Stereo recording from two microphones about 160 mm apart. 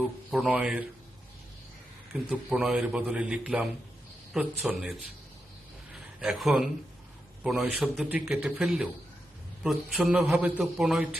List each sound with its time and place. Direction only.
0.3 s a man's voice: 5° right (ahead or behind)
2.3 s a man's voice: 5° right (ahead or behind)
5.9 s a sound: 5° right (ahead or behind)
7.4 s a man's voice: 5° right (ahead or behind)